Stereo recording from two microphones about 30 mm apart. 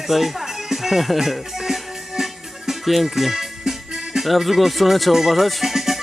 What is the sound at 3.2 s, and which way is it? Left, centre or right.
Speech, centre.